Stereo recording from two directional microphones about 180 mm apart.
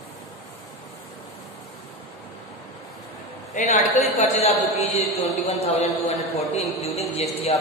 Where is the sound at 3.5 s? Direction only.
45° left (ahead or behind).